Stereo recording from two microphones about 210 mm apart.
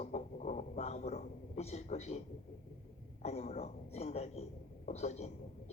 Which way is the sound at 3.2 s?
30° left (ahead or behind).